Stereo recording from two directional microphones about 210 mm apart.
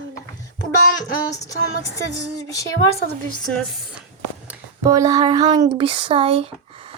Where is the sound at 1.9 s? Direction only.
15° left (ahead or behind).